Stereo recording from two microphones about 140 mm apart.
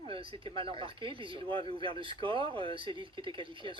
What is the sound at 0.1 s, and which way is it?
Speech, 40° right (ahead or behind).